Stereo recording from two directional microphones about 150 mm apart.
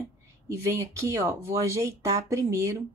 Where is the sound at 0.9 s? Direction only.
20° right (ahead or behind).